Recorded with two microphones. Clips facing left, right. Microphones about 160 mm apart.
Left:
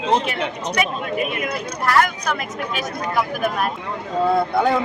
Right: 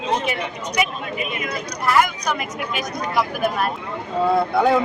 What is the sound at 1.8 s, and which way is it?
Speech, 10° right (ahead or behind).